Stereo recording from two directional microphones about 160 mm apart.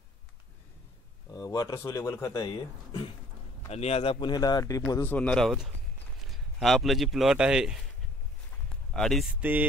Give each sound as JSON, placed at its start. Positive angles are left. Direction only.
{"t": 1.3, "sound": "speech", "side_deg": 25}
{"t": 3.6, "sound": "speech", "side_deg": 40}
{"t": 8.9, "sound": "speech", "side_deg": 0}
{"t": 9.3, "sound": "speech", "side_deg": -10}